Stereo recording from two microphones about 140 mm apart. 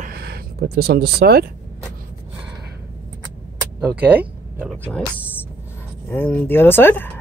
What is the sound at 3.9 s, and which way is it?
Speech, 10° right (ahead or behind).